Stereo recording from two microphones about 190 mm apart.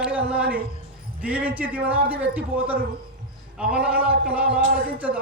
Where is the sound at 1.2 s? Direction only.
5° right (ahead or behind).